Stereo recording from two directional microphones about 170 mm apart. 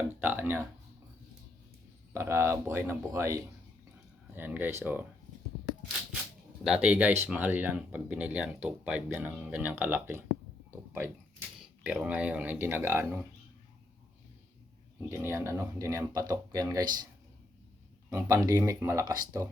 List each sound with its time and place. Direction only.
0.2 s speech: 10° right (ahead or behind)
2.1 s speech: 15° right (ahead or behind)
4.4 s speech: 10° right (ahead or behind)
6.7 s speech: 5° right (ahead or behind)
10.7 s a sound: 10° right (ahead or behind)
11.6 s speech: 5° right (ahead or behind)
15.1 s speech: 15° right (ahead or behind)
18.1 s speech: 15° right (ahead or behind)